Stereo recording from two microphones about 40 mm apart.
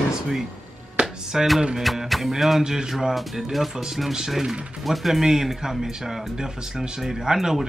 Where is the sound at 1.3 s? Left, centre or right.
Centre.